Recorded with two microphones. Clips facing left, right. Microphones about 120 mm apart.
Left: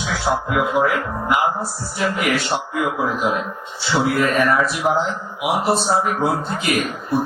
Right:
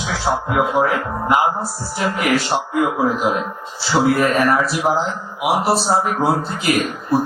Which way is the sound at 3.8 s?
30° right (ahead or behind).